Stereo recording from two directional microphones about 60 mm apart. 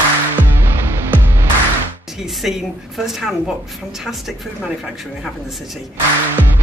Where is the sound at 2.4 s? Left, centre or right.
Centre.